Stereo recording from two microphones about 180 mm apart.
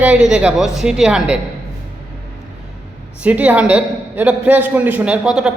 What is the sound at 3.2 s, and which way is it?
A man's voice, 10° right (ahead or behind).